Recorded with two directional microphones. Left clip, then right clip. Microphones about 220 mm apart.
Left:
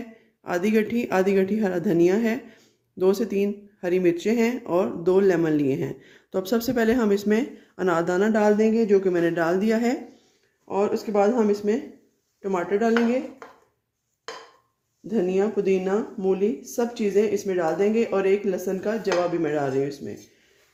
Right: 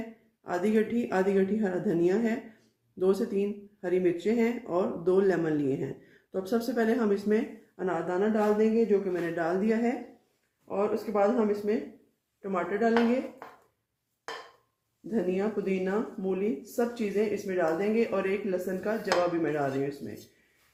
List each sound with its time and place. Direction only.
0.4 s speech: 35° left (ahead or behind)
15.1 s speech: 40° left (ahead or behind)